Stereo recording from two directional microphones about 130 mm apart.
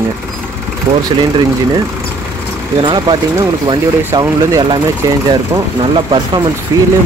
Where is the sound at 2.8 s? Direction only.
35° right (ahead or behind).